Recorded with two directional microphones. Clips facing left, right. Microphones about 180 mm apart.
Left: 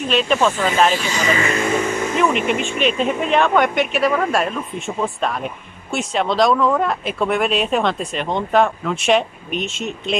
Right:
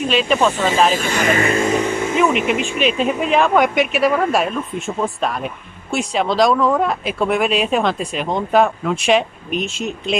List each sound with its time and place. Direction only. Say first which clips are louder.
0.1 s speech: even; centre (ahead or behind)
0.9 s speech: right 2 dB; 55° right (ahead or behind)
1.4 s speech: right 3 dB; 30° right (ahead or behind)
2.1 s speech: right 2 dB; centre (ahead or behind)